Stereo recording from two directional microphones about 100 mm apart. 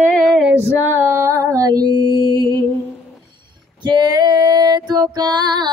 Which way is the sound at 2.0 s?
50° left (ahead or behind).